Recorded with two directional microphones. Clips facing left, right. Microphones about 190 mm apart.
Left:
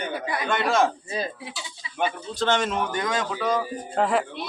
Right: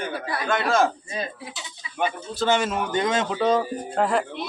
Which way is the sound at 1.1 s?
30° left (ahead or behind).